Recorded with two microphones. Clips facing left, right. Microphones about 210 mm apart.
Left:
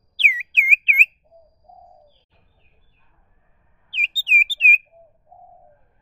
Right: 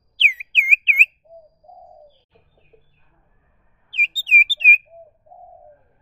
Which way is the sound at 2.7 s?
60° right (ahead or behind).